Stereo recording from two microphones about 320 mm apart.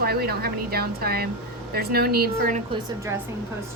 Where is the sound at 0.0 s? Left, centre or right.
Right.